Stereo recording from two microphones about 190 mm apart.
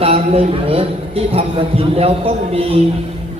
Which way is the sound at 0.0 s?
30° right (ahead or behind).